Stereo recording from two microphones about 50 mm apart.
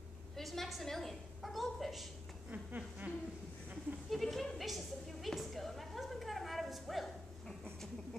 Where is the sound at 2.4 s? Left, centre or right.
Right.